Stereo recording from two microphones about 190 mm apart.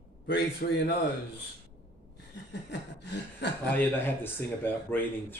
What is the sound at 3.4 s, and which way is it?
Speech, 65° left (ahead or behind).